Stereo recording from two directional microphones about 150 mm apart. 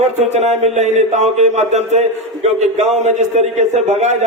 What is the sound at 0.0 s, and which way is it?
A man's voice, 50° right (ahead or behind).